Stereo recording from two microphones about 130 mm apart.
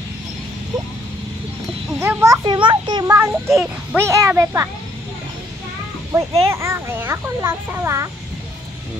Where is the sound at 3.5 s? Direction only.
5° right (ahead or behind).